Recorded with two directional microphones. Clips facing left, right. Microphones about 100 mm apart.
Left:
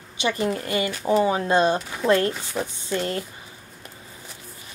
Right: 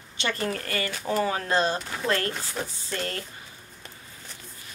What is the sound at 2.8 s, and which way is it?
Speech, 20° left (ahead or behind).